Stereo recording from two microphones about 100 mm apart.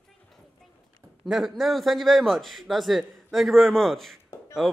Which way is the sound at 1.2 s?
Centre (ahead or behind).